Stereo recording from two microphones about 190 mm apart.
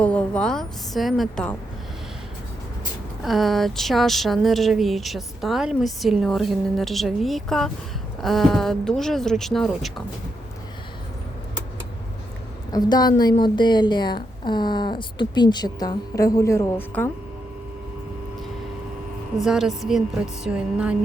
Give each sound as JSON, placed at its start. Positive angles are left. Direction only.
{"t": 0.0, "sound": "a sound", "side_deg": 5}
{"t": 3.2, "sound": "speech", "side_deg": 0}
{"t": 12.7, "sound": "speech", "side_deg": 20}
{"t": 19.4, "sound": "speech", "side_deg": 0}